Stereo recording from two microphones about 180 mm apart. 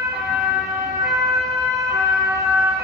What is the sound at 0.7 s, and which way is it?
Emergency vehicle, 15° right (ahead or behind).